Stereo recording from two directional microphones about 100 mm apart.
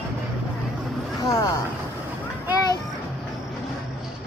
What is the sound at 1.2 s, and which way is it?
Speech, 35° left (ahead or behind).